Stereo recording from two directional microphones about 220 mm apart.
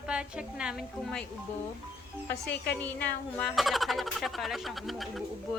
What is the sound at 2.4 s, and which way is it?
Speech, 45° left (ahead or behind).